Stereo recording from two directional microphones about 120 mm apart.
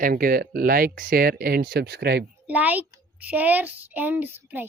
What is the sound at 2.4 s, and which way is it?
A child's voice, 15° right (ahead or behind).